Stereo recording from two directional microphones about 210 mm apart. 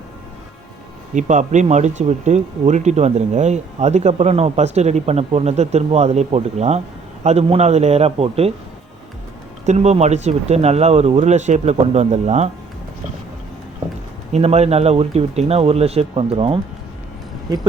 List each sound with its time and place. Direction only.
1.1 s speech: 35° right (ahead or behind)
9.6 s speech: 30° right (ahead or behind)
14.3 s speech: 30° right (ahead or behind)